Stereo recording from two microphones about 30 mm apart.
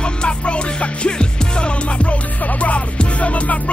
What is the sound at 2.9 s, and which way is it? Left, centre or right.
Music, left.